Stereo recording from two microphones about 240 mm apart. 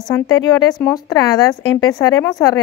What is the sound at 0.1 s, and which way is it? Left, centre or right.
Speech, centre.